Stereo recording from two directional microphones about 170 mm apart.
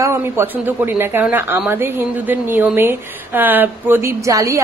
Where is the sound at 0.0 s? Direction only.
15° right (ahead or behind).